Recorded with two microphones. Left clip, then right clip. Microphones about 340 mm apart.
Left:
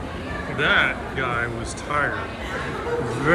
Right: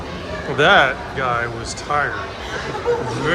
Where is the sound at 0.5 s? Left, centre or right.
Centre.